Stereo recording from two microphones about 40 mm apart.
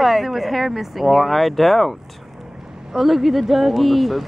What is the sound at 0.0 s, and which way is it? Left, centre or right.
Speech, centre.